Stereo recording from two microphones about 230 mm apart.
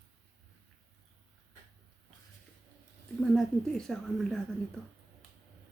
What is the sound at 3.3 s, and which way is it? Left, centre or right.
A woman's voice, centre.